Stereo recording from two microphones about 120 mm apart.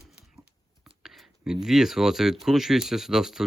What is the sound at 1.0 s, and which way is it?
Speech, 5° right (ahead or behind).